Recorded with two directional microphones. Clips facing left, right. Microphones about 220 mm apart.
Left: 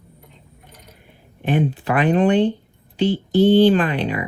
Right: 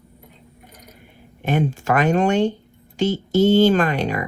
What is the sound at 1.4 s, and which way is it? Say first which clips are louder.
Speech: left 1 dB; 45° right (ahead or behind).